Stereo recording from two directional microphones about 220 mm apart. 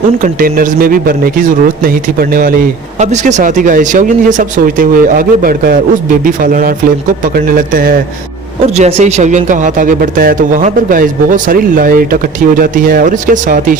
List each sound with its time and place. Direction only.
0.2 s speech: 40° right (ahead or behind)
8.7 s speech: 30° right (ahead or behind)